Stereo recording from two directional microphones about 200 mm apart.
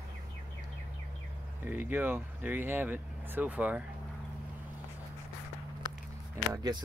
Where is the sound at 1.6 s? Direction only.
10° right (ahead or behind).